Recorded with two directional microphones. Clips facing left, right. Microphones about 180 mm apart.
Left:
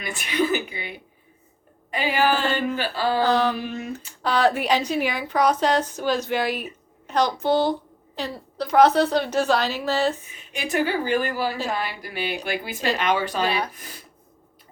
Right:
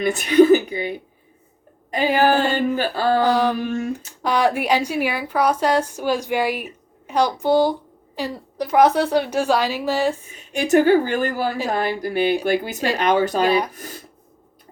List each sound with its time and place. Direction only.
0.0 s a woman's voice: 45° right (ahead or behind)
3.2 s a woman's voice: 15° right (ahead or behind)
10.5 s a woman's voice: 45° right (ahead or behind)